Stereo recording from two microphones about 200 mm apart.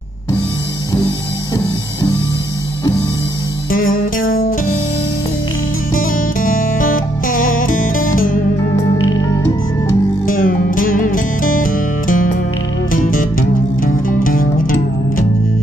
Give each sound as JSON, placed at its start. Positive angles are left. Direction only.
{"t": 4.3, "sound": "music", "side_deg": 45}
{"t": 5.9, "sound": "music", "side_deg": 45}
{"t": 10.2, "sound": "music", "side_deg": 45}